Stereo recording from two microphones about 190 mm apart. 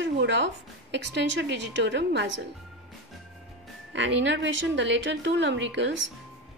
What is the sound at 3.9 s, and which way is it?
A woman's voice, 70° right (ahead or behind).